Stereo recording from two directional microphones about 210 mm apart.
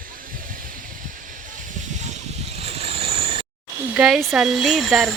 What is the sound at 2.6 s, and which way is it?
Mechanisms, 30° right (ahead or behind).